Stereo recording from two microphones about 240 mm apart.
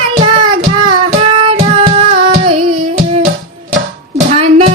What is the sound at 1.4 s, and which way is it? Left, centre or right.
Music, right.